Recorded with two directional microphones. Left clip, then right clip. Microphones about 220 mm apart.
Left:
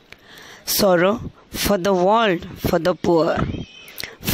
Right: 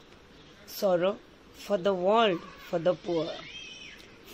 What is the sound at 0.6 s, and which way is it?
Speech, 50° left (ahead or behind).